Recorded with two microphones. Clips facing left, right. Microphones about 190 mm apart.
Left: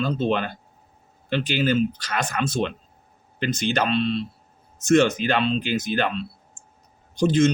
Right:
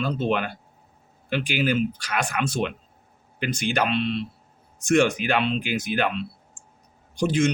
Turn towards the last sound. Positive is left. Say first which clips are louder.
# left 3 dB
turn(degrees=-10)  # may be behind; listen again after turning